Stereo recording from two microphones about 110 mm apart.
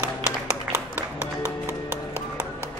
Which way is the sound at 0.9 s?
15° right (ahead or behind).